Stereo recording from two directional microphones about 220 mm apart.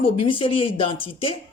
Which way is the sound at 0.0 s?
25° left (ahead or behind).